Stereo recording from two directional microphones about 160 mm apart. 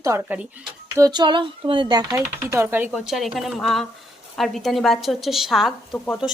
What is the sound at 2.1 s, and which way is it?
Speech, 15° right (ahead or behind).